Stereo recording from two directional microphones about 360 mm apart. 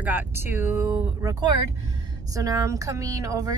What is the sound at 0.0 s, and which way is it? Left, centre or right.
Speech, centre.